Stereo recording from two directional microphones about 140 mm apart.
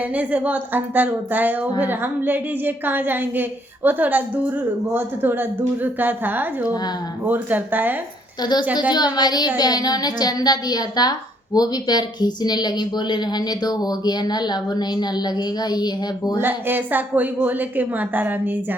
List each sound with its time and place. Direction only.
0.0 s a woman's voice: 10° right (ahead or behind)
8.4 s a woman's voice: 30° left (ahead or behind)
16.4 s a woman's voice: 15° right (ahead or behind)